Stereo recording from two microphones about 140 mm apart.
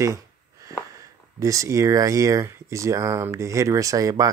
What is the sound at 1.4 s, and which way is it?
Speech, 20° right (ahead or behind).